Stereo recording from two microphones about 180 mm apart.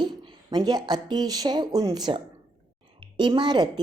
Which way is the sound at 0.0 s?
25° right (ahead or behind).